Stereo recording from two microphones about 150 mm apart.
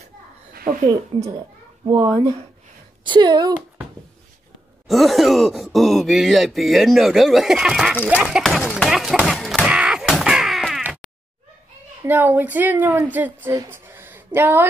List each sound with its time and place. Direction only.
0.5 s a sound: 75° right (ahead or behind)
1.1 s a child's voice: 35° right (ahead or behind)
4.8 s speech: centre (ahead or behind)
9.7 s crow: 5° right (ahead or behind)
10.8 s a sound: 5° right (ahead or behind)
12.0 s a woman's voice: 10° right (ahead or behind)